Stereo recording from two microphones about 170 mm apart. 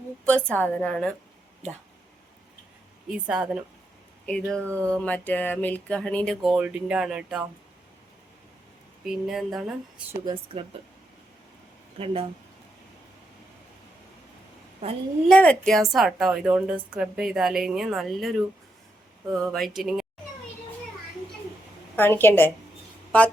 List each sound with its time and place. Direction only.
0.3 s a woman's voice: 5° left (ahead or behind)
3.1 s a woman's voice: 5° right (ahead or behind)
4.7 s speech: 15° right (ahead or behind)
4.9 s a woman's voice: 10° left (ahead or behind); by 7.4 s 5° right (ahead or behind)
9.0 s a woman's voice: centre (ahead or behind)
10.2 s speech: 30° right (ahead or behind)
11.9 s speech: 35° right (ahead or behind)
15.3 s a woman's voice: 5° left (ahead or behind)
21.9 s a woman's voice: 15° left (ahead or behind)